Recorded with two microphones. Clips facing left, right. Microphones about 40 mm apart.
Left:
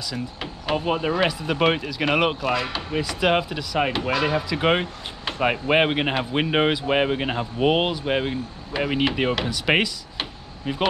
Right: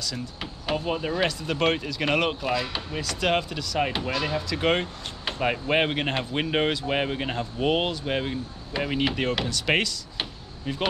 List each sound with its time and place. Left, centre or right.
0.0 s speech: centre